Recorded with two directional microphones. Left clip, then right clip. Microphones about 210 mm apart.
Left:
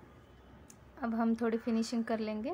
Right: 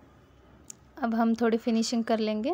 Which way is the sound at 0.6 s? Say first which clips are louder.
Right 8 dB; 35° right (ahead or behind).